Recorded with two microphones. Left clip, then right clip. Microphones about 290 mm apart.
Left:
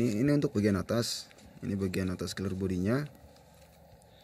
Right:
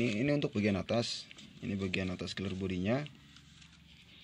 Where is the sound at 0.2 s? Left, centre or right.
Centre.